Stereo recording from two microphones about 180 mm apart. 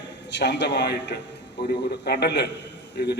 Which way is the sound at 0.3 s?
70° left (ahead or behind).